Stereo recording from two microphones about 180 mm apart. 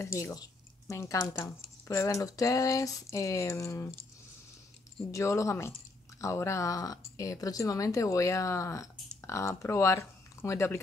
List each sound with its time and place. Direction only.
0.0 s speech: 15° left (ahead or behind)
5.1 s speech: 15° left (ahead or behind)